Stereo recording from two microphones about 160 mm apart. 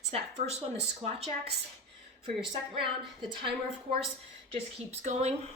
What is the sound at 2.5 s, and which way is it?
A woman's voice, 30° right (ahead or behind).